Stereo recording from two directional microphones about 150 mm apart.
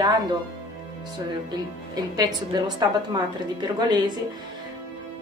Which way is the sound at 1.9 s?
25° right (ahead or behind).